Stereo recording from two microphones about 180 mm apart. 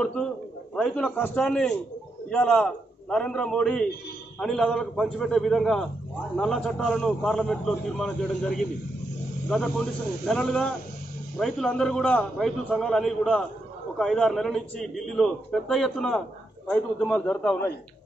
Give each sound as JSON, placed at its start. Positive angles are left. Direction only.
{"t": 0.0, "sound": "a man's voice", "side_deg": 5}